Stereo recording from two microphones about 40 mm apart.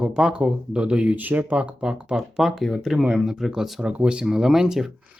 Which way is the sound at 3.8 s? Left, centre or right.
Right.